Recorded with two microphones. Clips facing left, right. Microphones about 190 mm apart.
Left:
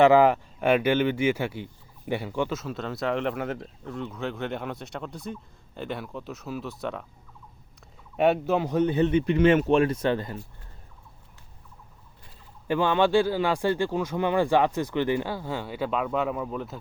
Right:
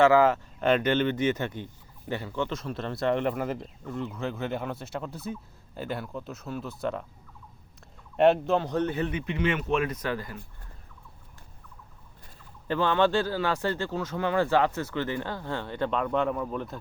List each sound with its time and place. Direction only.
0.0 s speech: 15° left (ahead or behind); by 7.0 s centre (ahead or behind)
8.1 s speech: 5° left (ahead or behind)
9.0 s a man's voice: 25° left (ahead or behind)
9.2 s speech: 40° left (ahead or behind)
12.6 s speech: 15° left (ahead or behind)